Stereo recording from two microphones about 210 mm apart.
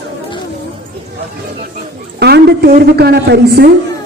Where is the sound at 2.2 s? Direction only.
50° right (ahead or behind).